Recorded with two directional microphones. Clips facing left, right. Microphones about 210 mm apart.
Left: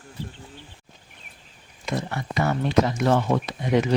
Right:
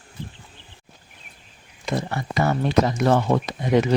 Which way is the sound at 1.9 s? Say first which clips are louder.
Right 2 dB; 35° right (ahead or behind).